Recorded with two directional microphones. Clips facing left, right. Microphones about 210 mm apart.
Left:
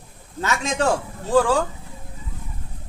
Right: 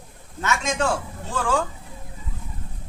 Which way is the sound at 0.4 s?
35° left (ahead or behind).